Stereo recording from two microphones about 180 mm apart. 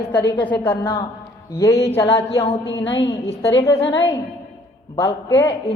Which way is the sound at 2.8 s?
80° left.